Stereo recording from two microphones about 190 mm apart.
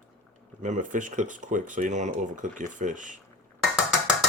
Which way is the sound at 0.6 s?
40° right (ahead or behind).